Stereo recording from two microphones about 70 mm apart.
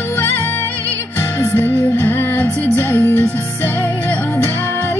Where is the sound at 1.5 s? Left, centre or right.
Left.